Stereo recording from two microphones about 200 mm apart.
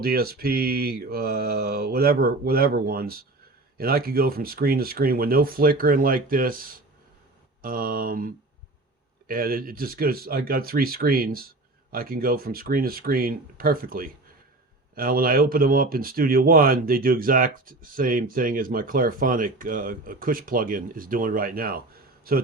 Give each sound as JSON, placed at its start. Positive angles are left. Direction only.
{"t": 0.0, "sound": "speech", "side_deg": -50}